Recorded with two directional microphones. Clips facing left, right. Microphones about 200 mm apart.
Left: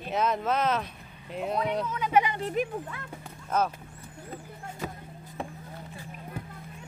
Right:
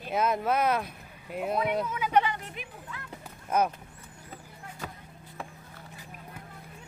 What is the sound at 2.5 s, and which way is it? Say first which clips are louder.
Speech: left 13 dB; 45° left (ahead or behind).